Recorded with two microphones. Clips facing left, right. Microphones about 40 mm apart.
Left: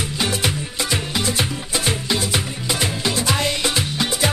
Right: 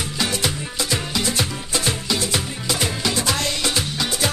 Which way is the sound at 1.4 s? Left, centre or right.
Centre.